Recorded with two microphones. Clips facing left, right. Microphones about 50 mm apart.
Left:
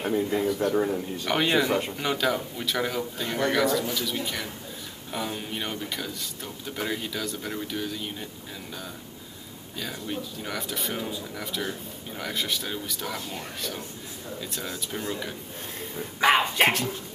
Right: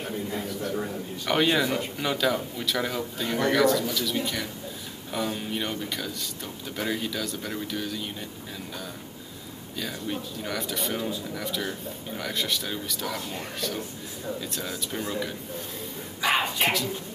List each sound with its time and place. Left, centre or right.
0.1 s a man's voice: left
1.2 s speech: centre
9.8 s speech: centre
16.2 s dog: left